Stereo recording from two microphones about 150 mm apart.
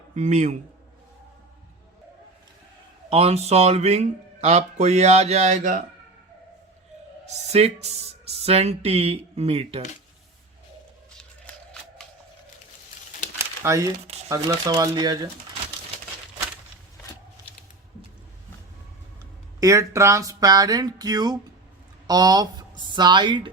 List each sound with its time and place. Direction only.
0.2 s speech: 50° right (ahead or behind)
3.1 s speech: 40° right (ahead or behind)
7.4 s speech: 45° right (ahead or behind)
11.2 s shuffling cards: 5° left (ahead or behind)
13.6 s speech: 20° right (ahead or behind)
19.5 s a woman's voice: 20° right (ahead or behind)